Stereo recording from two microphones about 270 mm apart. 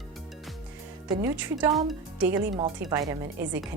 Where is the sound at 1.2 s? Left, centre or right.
Centre.